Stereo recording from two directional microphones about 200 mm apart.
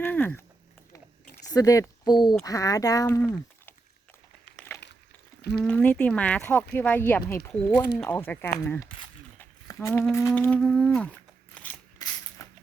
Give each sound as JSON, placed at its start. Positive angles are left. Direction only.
{"t": 0.0, "sound": "speech", "side_deg": 10}
{"t": 1.5, "sound": "speech", "side_deg": 20}
{"t": 4.5, "sound": "a sound", "side_deg": 10}
{"t": 5.4, "sound": "speech", "side_deg": 55}
{"t": 5.6, "sound": "speech", "side_deg": 5}
{"t": 9.4, "sound": "humming", "side_deg": 10}
{"t": 12.0, "sound": "a sound", "side_deg": 20}